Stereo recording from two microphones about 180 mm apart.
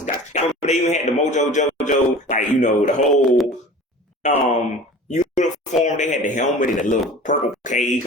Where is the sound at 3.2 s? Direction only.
Centre (ahead or behind).